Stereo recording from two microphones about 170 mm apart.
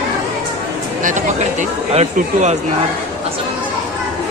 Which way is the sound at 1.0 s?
45° right (ahead or behind).